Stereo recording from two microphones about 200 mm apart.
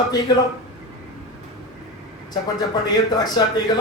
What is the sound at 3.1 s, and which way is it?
Speech, 20° left (ahead or behind).